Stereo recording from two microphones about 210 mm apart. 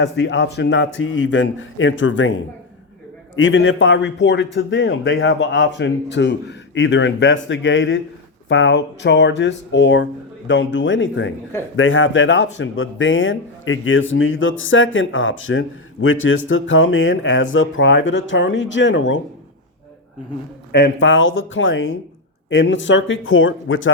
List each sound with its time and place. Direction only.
0.0 s speech: 55° left (ahead or behind)
3.3 s speech: 65° left (ahead or behind)
20.7 s speech: 60° left (ahead or behind)